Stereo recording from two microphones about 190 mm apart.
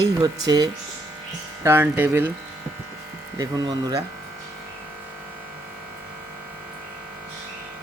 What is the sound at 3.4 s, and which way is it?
Speech, 20° right (ahead or behind).